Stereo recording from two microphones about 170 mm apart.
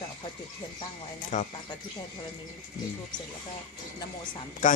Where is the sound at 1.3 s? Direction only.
45° left (ahead or behind).